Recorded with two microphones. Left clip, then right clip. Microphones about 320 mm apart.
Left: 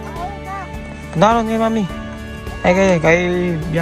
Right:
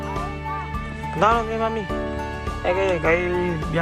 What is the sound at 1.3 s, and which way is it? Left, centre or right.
Speech, left.